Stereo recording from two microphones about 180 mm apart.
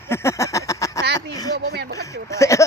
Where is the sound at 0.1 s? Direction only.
15° left (ahead or behind).